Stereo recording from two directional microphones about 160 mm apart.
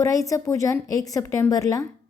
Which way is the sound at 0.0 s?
20° left (ahead or behind).